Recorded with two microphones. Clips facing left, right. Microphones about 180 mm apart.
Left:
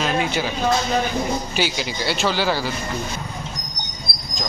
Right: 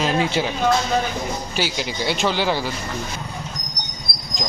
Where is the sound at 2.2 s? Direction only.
20° right (ahead or behind).